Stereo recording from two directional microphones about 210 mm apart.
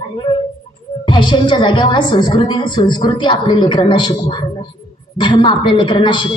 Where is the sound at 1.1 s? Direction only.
20° left (ahead or behind).